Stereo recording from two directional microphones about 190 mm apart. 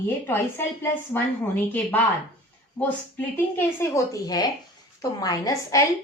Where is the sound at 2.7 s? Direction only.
10° left (ahead or behind).